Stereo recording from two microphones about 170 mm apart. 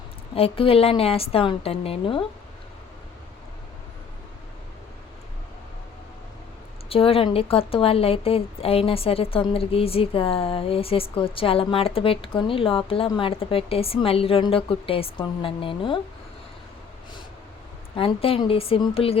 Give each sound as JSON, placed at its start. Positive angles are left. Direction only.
{"t": 0.3, "sound": "a woman's voice", "side_deg": 35}
{"t": 6.8, "sound": "a woman's voice", "side_deg": 35}
{"t": 17.9, "sound": "a woman's voice", "side_deg": 35}